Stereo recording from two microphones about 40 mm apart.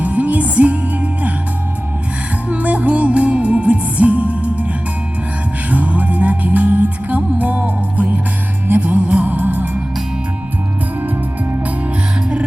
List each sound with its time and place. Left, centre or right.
0.0 s music: right
2.5 s music: right
5.7 s music: right
9.2 s music: right